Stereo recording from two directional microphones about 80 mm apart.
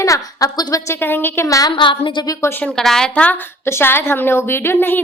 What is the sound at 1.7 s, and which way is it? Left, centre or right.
Speech, left.